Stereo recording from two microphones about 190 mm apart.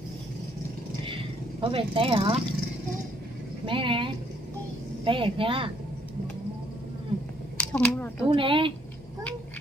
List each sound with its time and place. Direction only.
1.0 s vehicle: 25° right (ahead or behind)
3.6 s speech: 25° right (ahead or behind)
7.5 s speech: 5° left (ahead or behind)
8.3 s speech: 25° right (ahead or behind)